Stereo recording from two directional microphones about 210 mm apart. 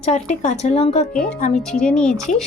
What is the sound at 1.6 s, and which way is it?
Speech, 5° left (ahead or behind).